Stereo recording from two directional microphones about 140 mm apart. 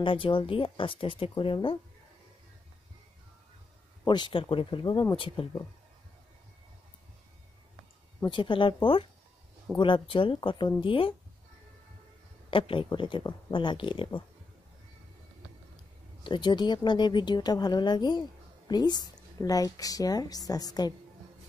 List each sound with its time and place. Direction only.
0.0 s speech: 35° left (ahead or behind)
4.0 s speech: 35° left (ahead or behind)
8.3 s speech: 35° left (ahead or behind)
9.8 s speech: 35° left (ahead or behind)
12.4 s speech: 40° left (ahead or behind)
16.3 s a woman's voice: 35° left (ahead or behind)